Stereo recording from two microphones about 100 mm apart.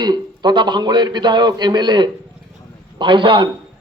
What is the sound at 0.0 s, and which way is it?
A man's voice, 45° right (ahead or behind).